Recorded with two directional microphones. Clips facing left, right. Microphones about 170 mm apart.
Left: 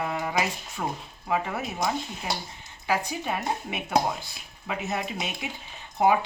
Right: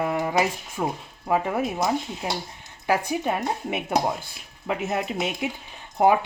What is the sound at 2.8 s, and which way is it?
Speech, 55° right (ahead or behind).